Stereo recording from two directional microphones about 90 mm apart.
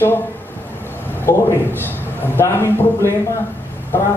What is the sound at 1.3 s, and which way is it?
Speech, 30° left (ahead or behind).